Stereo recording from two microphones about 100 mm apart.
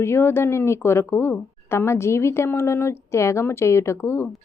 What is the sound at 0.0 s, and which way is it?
A woman's voice, 25° left (ahead or behind).